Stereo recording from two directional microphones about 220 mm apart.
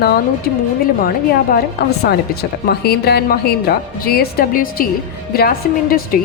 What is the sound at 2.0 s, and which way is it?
A woman's voice, 45° left (ahead or behind).